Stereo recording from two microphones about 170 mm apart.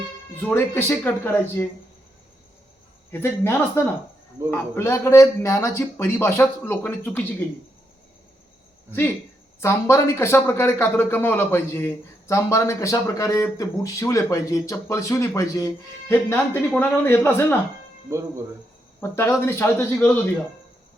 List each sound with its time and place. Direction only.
0.4 s speech: 15° left (ahead or behind)
3.1 s speech: 15° left (ahead or behind)
9.6 s speech: 15° left (ahead or behind)
18.9 s speech: 15° left (ahead or behind)